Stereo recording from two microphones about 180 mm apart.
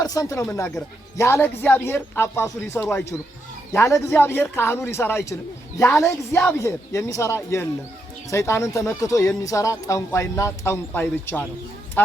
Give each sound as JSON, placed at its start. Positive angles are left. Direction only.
{"t": 0.0, "sound": "speech", "side_deg": 20}